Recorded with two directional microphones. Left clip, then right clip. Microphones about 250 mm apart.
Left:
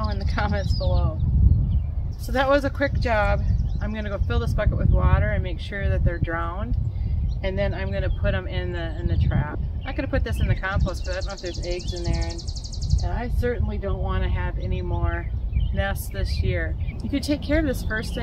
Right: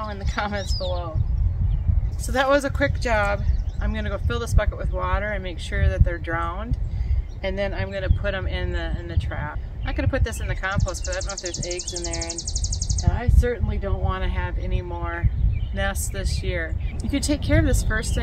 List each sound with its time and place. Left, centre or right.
0.0 s bird: centre
0.7 s speech: centre
2.3 s speech: centre
12.1 s a sound: right
13.0 s speech: centre